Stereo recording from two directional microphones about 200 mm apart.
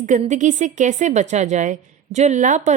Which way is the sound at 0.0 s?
35° right (ahead or behind).